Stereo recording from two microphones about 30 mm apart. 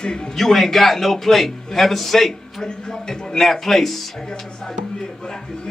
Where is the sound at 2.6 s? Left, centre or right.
Centre.